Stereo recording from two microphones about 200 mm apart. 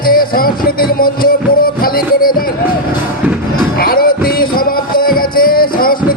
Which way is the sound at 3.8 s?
45° left (ahead or behind).